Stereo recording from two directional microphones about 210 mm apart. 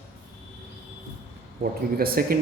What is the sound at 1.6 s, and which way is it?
Speech, 45° right (ahead or behind).